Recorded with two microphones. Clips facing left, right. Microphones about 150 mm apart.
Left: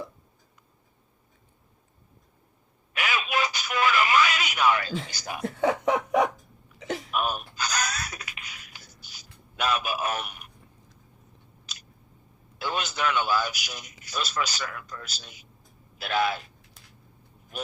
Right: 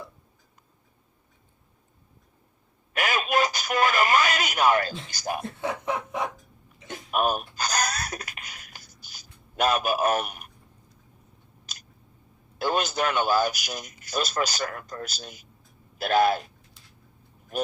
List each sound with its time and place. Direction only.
2.9 s radio: 45° right (ahead or behind)
5.1 s a man's voice: 45° right (ahead or behind)
5.5 s snicker: 90° left
6.7 s a sound: 90° left
7.1 s a sound: 45° right (ahead or behind)
11.6 s chewing: 45° right (ahead or behind)
12.5 s a man's voice: 45° right (ahead or behind)